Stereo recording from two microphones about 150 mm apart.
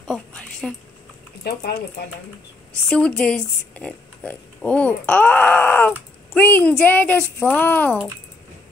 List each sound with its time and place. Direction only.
0.1 s a sound: 5° left (ahead or behind)
1.4 s speech: 90° left
2.9 s speech: 5° left (ahead or behind)